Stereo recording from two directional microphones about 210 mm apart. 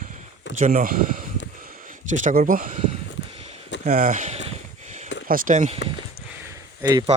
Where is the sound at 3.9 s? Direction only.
40° right (ahead or behind).